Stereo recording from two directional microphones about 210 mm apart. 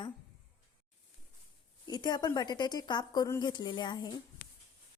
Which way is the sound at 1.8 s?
20° left (ahead or behind).